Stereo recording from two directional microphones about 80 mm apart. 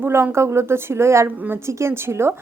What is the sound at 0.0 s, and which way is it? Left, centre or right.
A woman's voice, right.